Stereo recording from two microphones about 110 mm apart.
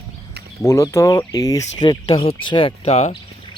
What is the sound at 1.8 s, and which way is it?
Speech, 50° left (ahead or behind).